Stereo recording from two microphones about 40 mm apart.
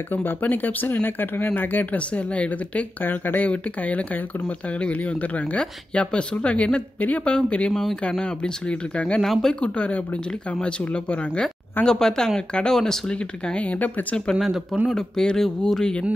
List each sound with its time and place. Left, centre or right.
0.1 s speech: left
2.0 s a woman's voice: left
3.0 s speech: left
3.4 s a woman's voice: left
9.2 s speech: centre
9.5 s a woman's voice: left
11.8 s speech: centre
13.6 s a woman's voice: left
14.4 s speech: centre
15.0 s speech: centre